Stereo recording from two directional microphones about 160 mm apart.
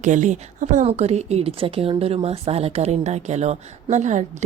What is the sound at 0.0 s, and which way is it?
Speech, 50° right (ahead or behind).